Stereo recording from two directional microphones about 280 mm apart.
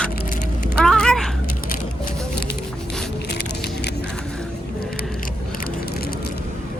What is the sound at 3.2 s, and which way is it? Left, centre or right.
Squish, left.